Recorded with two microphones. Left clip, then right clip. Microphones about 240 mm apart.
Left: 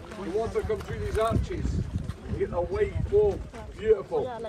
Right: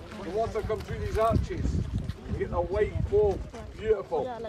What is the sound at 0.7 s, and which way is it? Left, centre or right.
Speech, right.